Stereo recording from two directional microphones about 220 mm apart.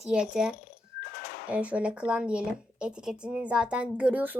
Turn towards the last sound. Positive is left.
turn(degrees=-5)  # may be behind; listen again after turning